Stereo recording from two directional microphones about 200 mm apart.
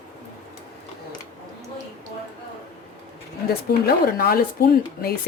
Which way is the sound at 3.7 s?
50° left (ahead or behind).